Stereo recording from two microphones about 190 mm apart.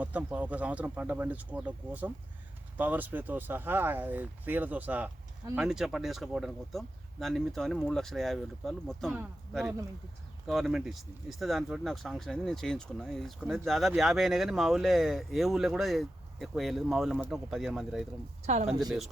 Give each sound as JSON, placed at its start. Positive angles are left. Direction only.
{"t": 0.0, "sound": "speech", "side_deg": -5}
{"t": 18.4, "sound": "speech", "side_deg": -35}